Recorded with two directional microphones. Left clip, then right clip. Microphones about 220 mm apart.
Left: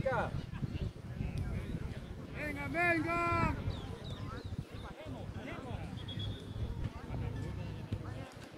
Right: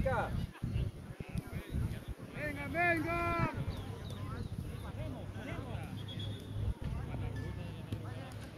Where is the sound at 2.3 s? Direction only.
50° left (ahead or behind).